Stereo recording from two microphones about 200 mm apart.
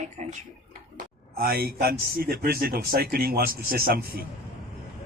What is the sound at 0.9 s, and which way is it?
Speech, 50° right (ahead or behind).